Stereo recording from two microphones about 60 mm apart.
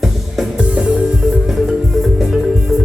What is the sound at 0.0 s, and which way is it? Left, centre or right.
Music, centre.